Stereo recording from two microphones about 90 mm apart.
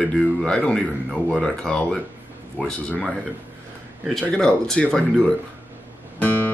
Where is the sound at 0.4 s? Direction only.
10° left (ahead or behind).